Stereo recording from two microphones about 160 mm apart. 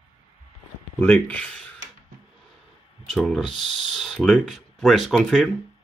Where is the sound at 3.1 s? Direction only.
Centre (ahead or behind).